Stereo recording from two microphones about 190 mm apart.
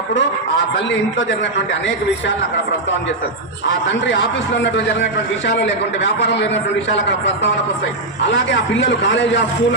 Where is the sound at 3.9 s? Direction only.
75° left (ahead or behind).